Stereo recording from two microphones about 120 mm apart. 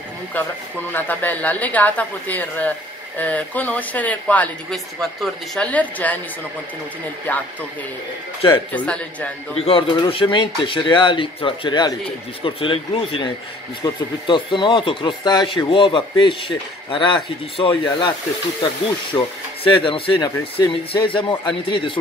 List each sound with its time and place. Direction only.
0.9 s speech: 15° left (ahead or behind)
7.3 s speech: 15° left (ahead or behind)
8.7 s speech: 10° left (ahead or behind)
9.6 s speech: 50° left (ahead or behind)
19.1 s speech: 40° left (ahead or behind)